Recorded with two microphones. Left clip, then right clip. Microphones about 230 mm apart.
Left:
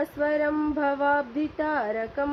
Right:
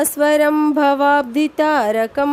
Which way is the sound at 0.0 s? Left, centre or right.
Right.